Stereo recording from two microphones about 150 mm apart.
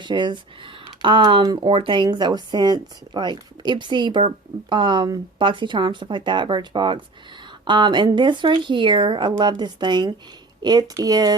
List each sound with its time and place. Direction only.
0.0 s speech: 30° right (ahead or behind)